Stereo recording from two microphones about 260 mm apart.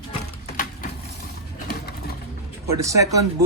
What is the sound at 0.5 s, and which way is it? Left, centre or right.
Wood, left.